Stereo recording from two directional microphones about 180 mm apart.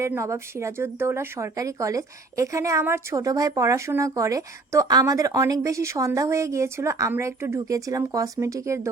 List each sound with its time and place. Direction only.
0.0 s speech: 15° right (ahead or behind)